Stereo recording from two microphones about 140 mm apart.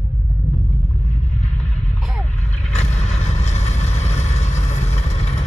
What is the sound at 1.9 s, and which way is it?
Vehicle, centre (ahead or behind).